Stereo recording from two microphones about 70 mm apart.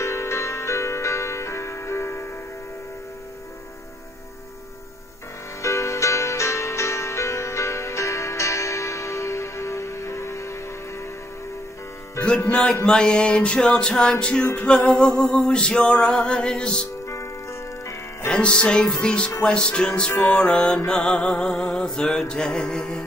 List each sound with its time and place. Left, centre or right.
0.0 s music: left
5.6 s music: left
12.4 s music: centre
14.4 s music: left
14.7 s music: centre
17.1 s music: left
18.3 s music: centre